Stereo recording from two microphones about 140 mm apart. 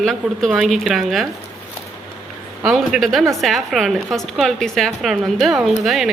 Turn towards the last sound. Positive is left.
turn(degrees=0)  # may be behind; listen again after turning